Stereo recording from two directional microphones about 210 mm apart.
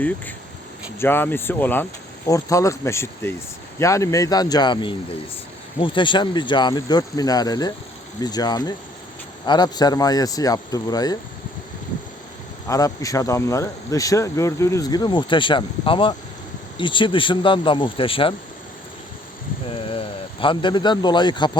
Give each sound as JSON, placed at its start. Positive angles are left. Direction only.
{"t": 0.9, "sound": "speech", "side_deg": 10}
{"t": 12.6, "sound": "speech", "side_deg": 15}
{"t": 19.6, "sound": "a man's voice", "side_deg": 25}